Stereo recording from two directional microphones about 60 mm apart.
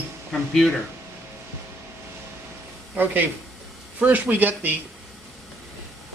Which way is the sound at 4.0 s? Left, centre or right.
Right.